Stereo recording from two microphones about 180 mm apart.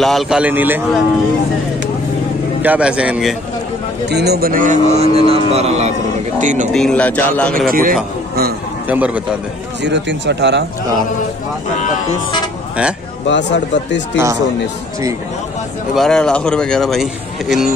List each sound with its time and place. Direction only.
0.0 s a man's voice: centre (ahead or behind)
2.6 s a man's voice: 10° right (ahead or behind)
4.1 s a man's voice: 65° right (ahead or behind); by 6.7 s 45° right (ahead or behind)
6.7 s speech: 5° left (ahead or behind)
7.7 s a man's voice: 50° right (ahead or behind)
8.8 s a man's voice: 10° right (ahead or behind)
9.8 s speech: 75° right (ahead or behind)
13.3 s speech: 80° left
14.1 s a man's voice: 15° right (ahead or behind)
15.9 s a man's voice: centre (ahead or behind)